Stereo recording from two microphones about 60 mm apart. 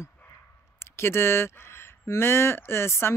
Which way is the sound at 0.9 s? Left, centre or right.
Left.